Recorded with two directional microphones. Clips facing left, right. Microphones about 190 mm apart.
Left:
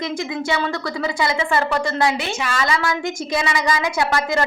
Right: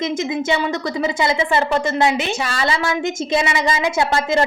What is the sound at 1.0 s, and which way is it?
A woman's voice, 20° right (ahead or behind).